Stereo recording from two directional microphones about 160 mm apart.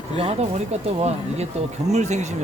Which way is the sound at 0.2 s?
40° right (ahead or behind).